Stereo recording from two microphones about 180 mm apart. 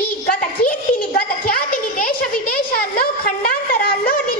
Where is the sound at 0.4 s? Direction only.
55° left (ahead or behind).